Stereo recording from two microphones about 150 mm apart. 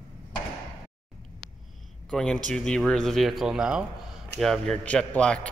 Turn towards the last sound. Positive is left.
turn(degrees=5)  # may be behind; listen again after turning